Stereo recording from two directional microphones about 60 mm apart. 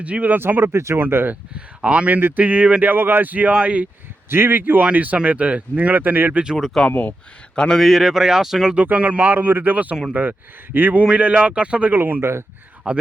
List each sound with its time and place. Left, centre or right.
0.0 s speech: right
0.3 s speech: right
0.9 s speech: right
1.5 s speech: centre
2.9 s speech: right
4.3 s speech: right
6.8 s speech: left
7.5 s a man's voice: centre
7.8 s speech: centre
8.7 s speech: right
11.9 s speech: right
12.2 s speech: right
12.9 s speech: centre